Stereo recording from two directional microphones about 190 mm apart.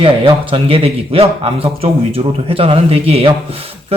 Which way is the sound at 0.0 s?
30° right (ahead or behind).